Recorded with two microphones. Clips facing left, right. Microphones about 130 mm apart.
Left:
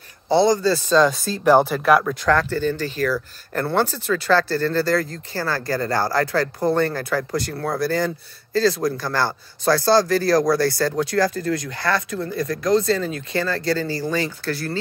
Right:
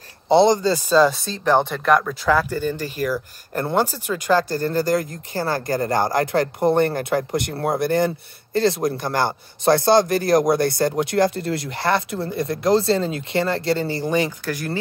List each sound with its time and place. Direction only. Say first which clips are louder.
0.3 s speech: right 2 dB; 20° right (ahead or behind); by 2.1 s 5° left (ahead or behind)
2.2 s a man's voice: even; 10° right (ahead or behind)